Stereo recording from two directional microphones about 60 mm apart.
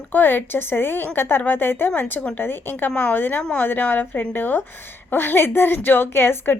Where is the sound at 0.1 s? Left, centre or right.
Left.